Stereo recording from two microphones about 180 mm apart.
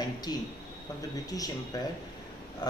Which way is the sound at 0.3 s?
20° left (ahead or behind).